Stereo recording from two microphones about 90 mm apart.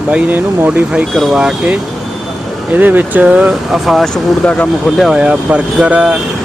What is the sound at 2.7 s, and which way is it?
Speech, 20° right (ahead or behind).